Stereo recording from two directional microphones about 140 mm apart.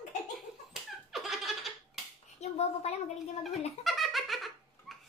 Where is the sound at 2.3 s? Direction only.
50° left (ahead or behind).